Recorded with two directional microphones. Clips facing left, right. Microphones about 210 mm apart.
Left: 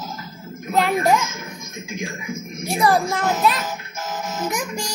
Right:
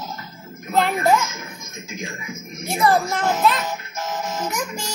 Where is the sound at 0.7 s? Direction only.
15° left (ahead or behind).